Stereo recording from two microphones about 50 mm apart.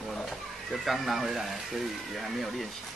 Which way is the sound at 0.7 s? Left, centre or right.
Centre.